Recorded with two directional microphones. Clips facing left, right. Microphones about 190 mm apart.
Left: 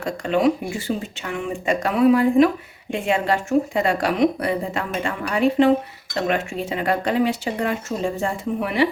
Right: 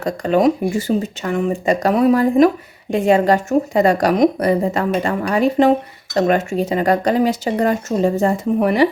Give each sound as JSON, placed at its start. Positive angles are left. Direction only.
{"t": 0.0, "sound": "speech", "side_deg": -40}